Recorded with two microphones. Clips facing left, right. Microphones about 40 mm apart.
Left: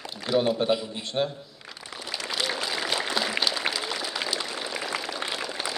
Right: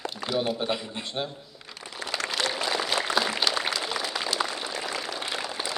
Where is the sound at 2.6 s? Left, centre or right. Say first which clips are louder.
Right 1 dB; centre.